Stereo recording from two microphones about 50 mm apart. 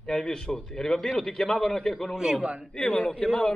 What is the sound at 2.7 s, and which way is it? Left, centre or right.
Speech, centre.